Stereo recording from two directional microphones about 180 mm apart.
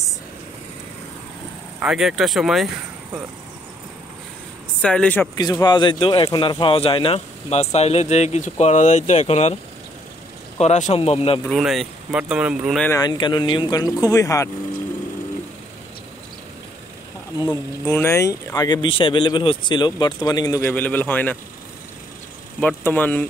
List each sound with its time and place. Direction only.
1.8 s speech: 5° right (ahead or behind)
4.8 s speech: 5° left (ahead or behind)
5.4 s speech: 20° left (ahead or behind); by 9.6 s 35° left (ahead or behind)
10.6 s speech: 40° left (ahead or behind)
11.4 s speech: centre (ahead or behind)
13.0 s speech: 25° left (ahead or behind)
17.5 s speech: 15° left (ahead or behind)
22.6 s speech: 10° left (ahead or behind)